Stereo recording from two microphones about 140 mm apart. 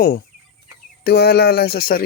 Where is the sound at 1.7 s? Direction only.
90° left.